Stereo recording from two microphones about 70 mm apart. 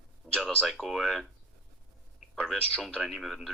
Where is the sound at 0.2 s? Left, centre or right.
Centre.